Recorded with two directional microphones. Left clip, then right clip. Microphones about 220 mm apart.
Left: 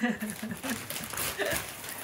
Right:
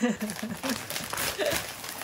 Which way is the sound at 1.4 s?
5° right (ahead or behind).